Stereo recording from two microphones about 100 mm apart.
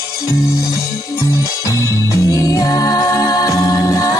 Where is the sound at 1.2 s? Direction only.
35° left (ahead or behind).